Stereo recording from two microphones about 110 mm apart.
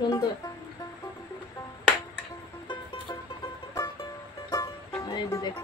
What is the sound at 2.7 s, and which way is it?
Music, 40° left (ahead or behind).